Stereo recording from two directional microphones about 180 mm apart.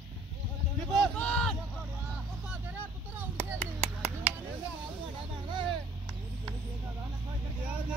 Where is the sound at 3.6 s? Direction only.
35° right (ahead or behind).